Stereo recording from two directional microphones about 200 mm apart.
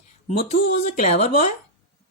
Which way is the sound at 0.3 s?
35° left (ahead or behind).